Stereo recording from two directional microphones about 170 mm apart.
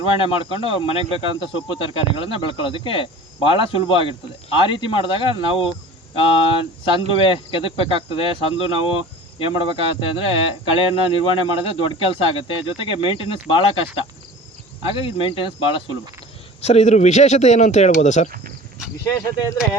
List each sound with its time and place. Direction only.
0.0 s speech: 30° left (ahead or behind)